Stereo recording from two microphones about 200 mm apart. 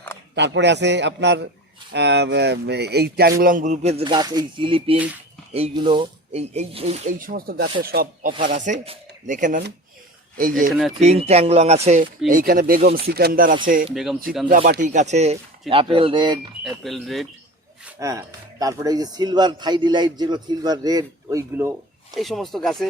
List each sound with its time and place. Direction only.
0.3 s a man's voice: 60° right (ahead or behind)
8.4 s speech: 40° right (ahead or behind)
10.7 s speech: centre (ahead or behind)
11.0 s speech: 30° right (ahead or behind)
12.3 s speech: 45° right (ahead or behind)
13.9 s speech: centre (ahead or behind)
14.4 s speech: 45° right (ahead or behind); by 16.4 s 20° right (ahead or behind)
16.6 s speech: centre (ahead or behind)
17.8 s speech: 15° right (ahead or behind)
22.1 s speech: centre (ahead or behind)